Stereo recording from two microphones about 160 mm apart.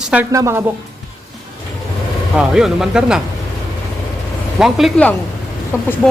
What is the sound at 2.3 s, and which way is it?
Speech, 5° right (ahead or behind).